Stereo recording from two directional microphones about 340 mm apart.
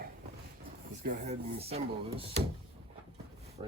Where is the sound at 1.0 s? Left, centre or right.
Right.